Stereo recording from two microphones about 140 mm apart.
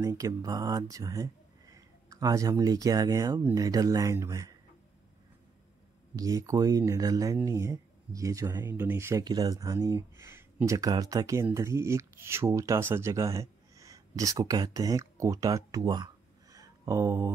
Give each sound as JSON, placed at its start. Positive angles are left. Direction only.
{"t": 0.0, "sound": "speech", "side_deg": -25}
{"t": 6.1, "sound": "speech", "side_deg": -25}
{"t": 16.5, "sound": "a sound", "side_deg": -25}